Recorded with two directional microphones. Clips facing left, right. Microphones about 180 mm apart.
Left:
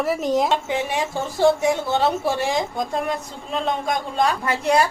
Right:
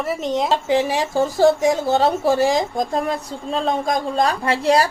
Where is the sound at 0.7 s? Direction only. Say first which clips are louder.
Right 5 dB; 35° right (ahead or behind).